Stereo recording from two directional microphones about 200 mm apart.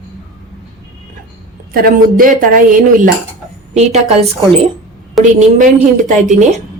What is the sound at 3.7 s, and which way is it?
Speech, 35° right (ahead or behind).